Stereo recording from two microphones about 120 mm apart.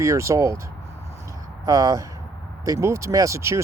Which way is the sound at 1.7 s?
30° right (ahead or behind).